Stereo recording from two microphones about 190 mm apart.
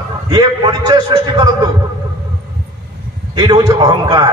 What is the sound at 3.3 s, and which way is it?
Speech, 20° right (ahead or behind).